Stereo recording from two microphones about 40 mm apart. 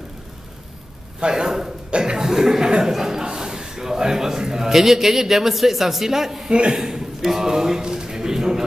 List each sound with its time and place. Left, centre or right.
1.2 s a man's voice: centre
1.9 s cough: right
2.1 s chuckle: centre
2.8 s a man's voice: centre